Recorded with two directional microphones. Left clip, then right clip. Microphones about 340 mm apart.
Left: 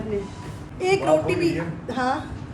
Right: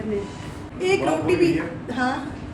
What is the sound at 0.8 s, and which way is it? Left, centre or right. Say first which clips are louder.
A woman's voice: left 1 dB; centre.